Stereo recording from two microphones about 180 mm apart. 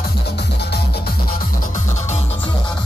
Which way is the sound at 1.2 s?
50° left (ahead or behind).